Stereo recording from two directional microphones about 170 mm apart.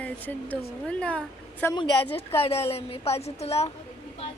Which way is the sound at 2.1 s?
35° left (ahead or behind).